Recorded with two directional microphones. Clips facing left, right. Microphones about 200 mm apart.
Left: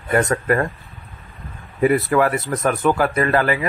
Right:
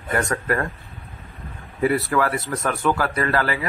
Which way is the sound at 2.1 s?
20° left (ahead or behind).